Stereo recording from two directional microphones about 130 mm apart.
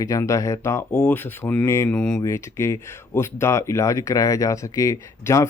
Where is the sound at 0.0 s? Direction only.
25° left (ahead or behind).